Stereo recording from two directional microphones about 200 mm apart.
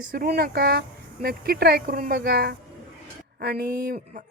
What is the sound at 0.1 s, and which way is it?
A woman's voice, 50° right (ahead or behind).